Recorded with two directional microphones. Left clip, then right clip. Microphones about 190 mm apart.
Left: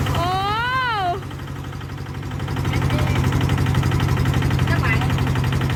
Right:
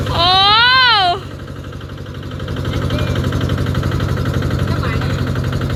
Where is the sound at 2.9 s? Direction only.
40° left (ahead or behind).